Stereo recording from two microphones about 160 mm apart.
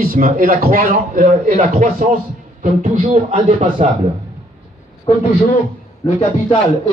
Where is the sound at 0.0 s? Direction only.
65° right (ahead or behind); by 3.9 s 45° right (ahead or behind).